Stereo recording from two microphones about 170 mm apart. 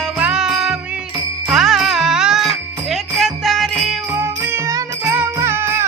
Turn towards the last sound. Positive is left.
turn(degrees=-15)  # may be behind; listen again after turning